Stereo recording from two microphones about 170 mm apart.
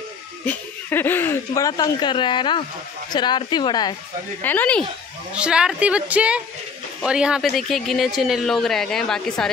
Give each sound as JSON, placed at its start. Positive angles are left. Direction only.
{"t": 0.5, "sound": "speech", "side_deg": 10}
{"t": 4.4, "sound": "speech", "side_deg": 10}
{"t": 5.3, "sound": "a woman's voice", "side_deg": -5}